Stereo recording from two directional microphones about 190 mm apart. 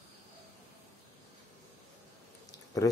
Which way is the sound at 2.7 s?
20° left (ahead or behind).